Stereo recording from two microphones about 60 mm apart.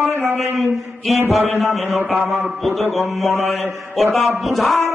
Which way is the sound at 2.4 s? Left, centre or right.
Centre.